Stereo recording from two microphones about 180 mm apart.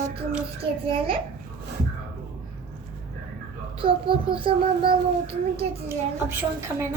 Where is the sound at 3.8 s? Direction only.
30° right (ahead or behind).